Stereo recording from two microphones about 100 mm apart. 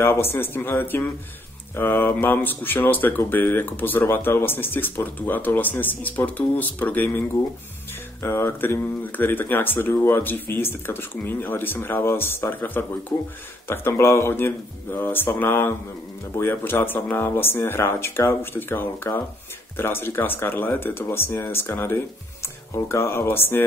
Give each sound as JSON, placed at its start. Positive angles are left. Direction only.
{"t": 0.0, "sound": "speech", "side_deg": 25}